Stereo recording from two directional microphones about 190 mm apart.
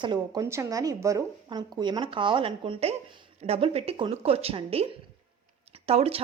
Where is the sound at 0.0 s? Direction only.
20° right (ahead or behind).